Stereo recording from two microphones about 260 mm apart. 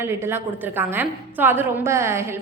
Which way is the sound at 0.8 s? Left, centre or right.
Centre.